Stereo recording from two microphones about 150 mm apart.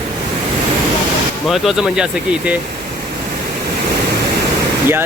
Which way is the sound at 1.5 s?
Centre (ahead or behind).